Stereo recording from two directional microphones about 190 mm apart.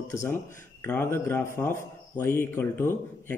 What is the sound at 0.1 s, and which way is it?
Speech, 15° left (ahead or behind).